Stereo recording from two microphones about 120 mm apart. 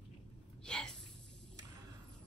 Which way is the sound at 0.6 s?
5° left (ahead or behind).